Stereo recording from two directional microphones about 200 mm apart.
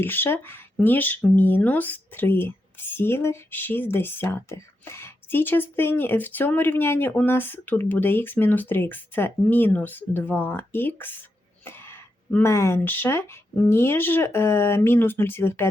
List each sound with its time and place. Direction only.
0.0 s speech: 10° left (ahead or behind)